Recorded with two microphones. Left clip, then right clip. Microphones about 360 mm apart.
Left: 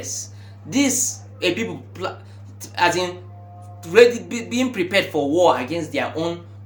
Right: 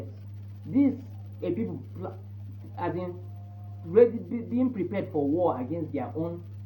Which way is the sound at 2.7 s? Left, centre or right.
Left.